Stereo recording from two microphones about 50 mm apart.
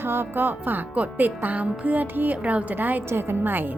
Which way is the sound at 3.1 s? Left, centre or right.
Right.